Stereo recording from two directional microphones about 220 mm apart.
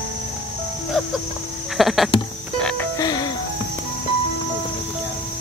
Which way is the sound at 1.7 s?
Centre (ahead or behind).